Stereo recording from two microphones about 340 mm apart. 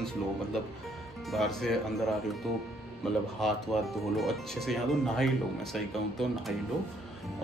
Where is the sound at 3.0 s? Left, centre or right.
Centre.